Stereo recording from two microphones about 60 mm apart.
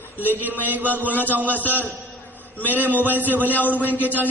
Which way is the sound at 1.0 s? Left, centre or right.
Left.